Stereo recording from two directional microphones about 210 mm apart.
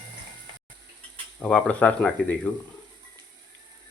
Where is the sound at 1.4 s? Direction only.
5° left (ahead or behind).